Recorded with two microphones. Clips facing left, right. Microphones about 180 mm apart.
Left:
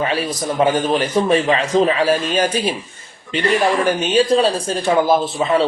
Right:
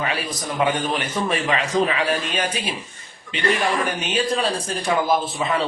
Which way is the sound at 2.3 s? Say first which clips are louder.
Left 7 dB; 40° left (ahead or behind).